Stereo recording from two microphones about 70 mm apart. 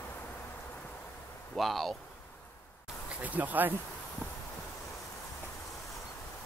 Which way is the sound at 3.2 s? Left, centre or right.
Right.